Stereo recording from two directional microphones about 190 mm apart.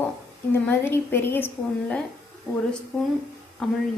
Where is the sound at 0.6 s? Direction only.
10° left (ahead or behind).